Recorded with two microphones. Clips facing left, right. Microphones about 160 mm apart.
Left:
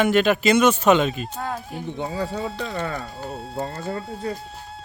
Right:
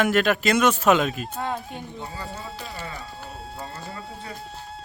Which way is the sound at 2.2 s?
65° left (ahead or behind).